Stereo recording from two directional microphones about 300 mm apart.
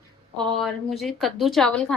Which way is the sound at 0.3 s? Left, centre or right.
Centre.